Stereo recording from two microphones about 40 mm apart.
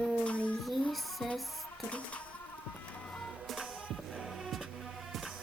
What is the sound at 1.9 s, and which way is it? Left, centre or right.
Music, left.